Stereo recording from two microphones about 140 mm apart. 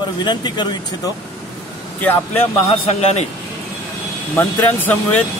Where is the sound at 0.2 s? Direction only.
30° left (ahead or behind).